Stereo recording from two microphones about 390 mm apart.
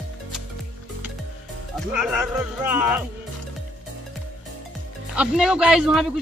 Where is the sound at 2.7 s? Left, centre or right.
Centre.